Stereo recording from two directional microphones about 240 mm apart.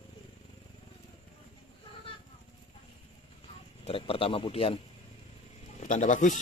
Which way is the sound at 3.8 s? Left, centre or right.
Left.